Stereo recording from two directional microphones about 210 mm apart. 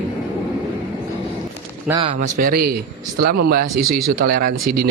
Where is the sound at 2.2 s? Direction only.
40° right (ahead or behind).